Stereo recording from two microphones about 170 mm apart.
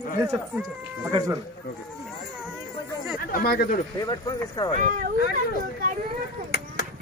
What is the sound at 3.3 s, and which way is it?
Speech, 60° left (ahead or behind).